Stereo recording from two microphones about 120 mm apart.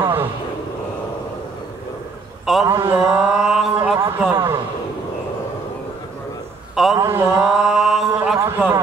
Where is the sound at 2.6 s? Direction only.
25° right (ahead or behind).